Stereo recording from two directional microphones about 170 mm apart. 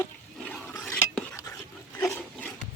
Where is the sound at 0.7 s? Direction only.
15° left (ahead or behind).